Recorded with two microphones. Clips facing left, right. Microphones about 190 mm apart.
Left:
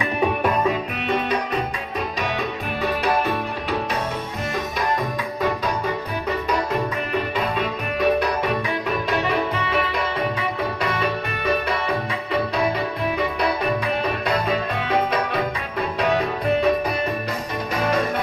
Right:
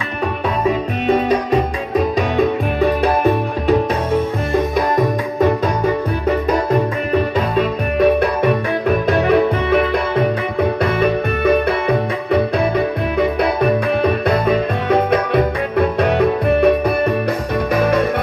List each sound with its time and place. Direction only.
7.9 s music: 55° right (ahead or behind)